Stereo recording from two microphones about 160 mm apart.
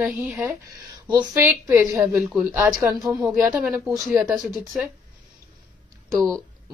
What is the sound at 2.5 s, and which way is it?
Speech, 15° right (ahead or behind).